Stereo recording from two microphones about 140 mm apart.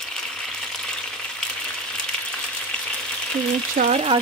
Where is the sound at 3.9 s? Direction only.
50° right (ahead or behind).